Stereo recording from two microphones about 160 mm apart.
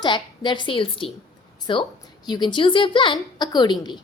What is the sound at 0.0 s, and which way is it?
A woman's voice, 30° left (ahead or behind).